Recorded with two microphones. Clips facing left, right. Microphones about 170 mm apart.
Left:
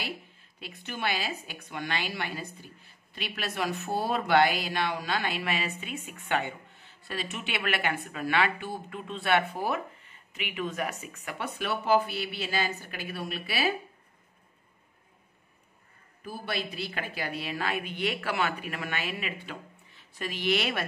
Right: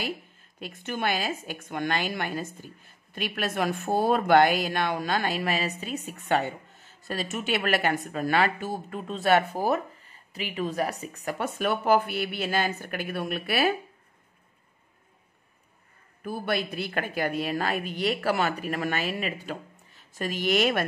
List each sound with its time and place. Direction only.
0.6 s a woman's voice: 45° right (ahead or behind)
16.3 s a woman's voice: 55° right (ahead or behind)